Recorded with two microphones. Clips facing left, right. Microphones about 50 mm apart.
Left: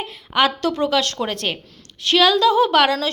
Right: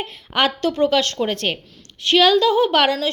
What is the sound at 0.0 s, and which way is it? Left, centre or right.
A woman's voice, right.